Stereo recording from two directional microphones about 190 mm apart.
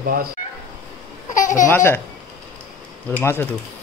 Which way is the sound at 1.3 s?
40° left (ahead or behind).